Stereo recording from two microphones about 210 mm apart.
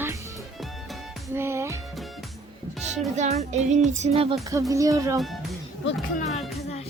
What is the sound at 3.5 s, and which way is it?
Child singing, 35° right (ahead or behind).